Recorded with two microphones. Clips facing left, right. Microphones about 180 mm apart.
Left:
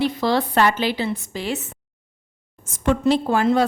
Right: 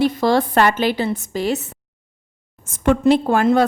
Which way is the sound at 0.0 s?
45° right (ahead or behind).